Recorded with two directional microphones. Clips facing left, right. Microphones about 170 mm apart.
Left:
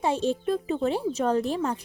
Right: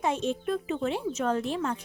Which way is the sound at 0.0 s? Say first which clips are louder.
Left 3 dB; 35° left (ahead or behind).